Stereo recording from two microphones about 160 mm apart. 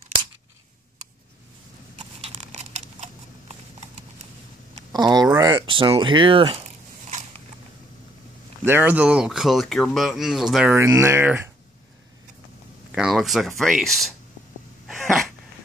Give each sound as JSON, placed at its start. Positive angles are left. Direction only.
{"t": 2.0, "sound": "scissors", "side_deg": -40}
{"t": 4.9, "sound": "a sound", "side_deg": -25}
{"t": 6.6, "sound": "biting", "side_deg": -50}
{"t": 8.6, "sound": "speech", "side_deg": -15}
{"t": 10.7, "sound": "speech", "side_deg": -15}
{"t": 12.9, "sound": "speech", "side_deg": 0}
{"t": 14.9, "sound": "sneeze", "side_deg": 0}